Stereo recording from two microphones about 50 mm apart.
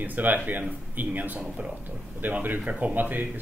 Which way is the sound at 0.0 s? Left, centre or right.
Right.